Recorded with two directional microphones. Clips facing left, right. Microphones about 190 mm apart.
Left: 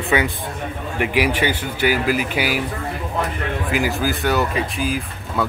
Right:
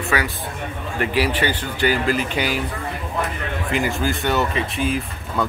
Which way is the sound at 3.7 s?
Centre (ahead or behind).